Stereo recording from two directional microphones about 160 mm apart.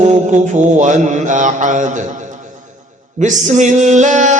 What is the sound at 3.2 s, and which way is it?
Mantra, 50° right (ahead or behind).